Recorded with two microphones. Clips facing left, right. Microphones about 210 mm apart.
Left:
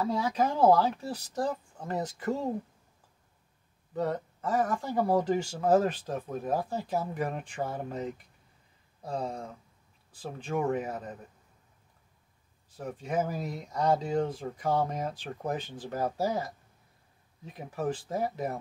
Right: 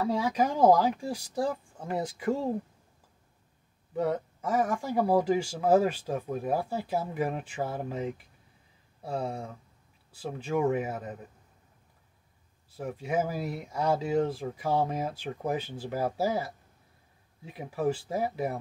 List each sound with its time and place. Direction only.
0.1 s speech: 15° right (ahead or behind)
3.9 s speech: 10° right (ahead or behind)
12.7 s speech: 10° right (ahead or behind)